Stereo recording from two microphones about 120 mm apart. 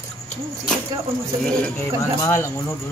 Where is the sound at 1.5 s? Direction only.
10° left (ahead or behind).